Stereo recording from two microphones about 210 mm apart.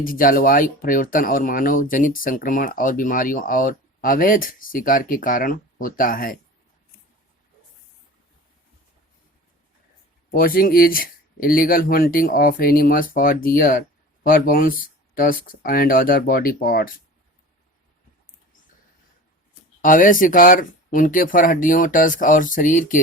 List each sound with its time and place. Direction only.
0.0 s speech: 40° left (ahead or behind)
10.3 s speech: 45° left (ahead or behind)
19.8 s speech: 40° left (ahead or behind)